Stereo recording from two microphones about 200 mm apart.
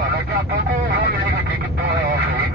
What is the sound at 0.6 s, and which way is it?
Vehicle, 55° right (ahead or behind).